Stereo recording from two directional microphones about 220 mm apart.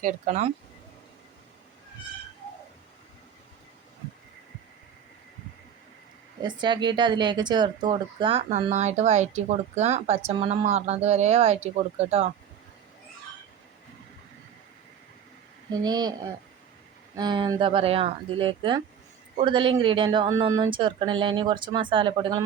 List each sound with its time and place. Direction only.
0.0 s speech: 30° right (ahead or behind)
6.4 s speech: 20° right (ahead or behind)
15.7 s speech: 20° right (ahead or behind)
17.2 s speech: 20° right (ahead or behind)